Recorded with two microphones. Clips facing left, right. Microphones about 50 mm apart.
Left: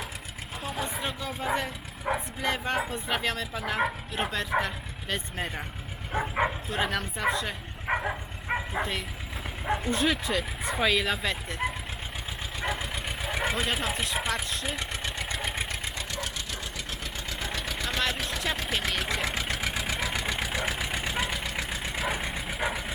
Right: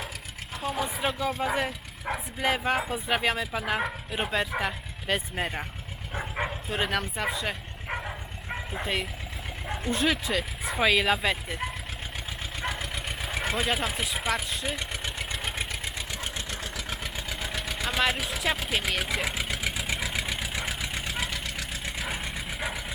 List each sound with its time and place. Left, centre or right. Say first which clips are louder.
0.6 s speech: right 4 dB; centre
2.1 s bow-wow: left 3 dB; centre
2.4 s speech: right 5 dB; centre
6.1 s bow-wow: left 5 dB; centre
6.7 s speech: right 1 dB; centre
7.9 s dog: left 5 dB; left
8.8 s speech: right 1 dB; centre
12.6 s vehicle: left 1 dB; centre
13.5 s speech: right 1 dB; centre
15.4 s vehicle: left 1 dB; centre
15.7 s engine: left 1 dB; centre
17.2 s engine: left 1 dB; centre
20.6 s vehicle: left 2 dB; centre